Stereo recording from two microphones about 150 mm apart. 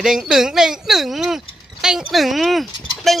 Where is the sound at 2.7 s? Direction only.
30° left (ahead or behind).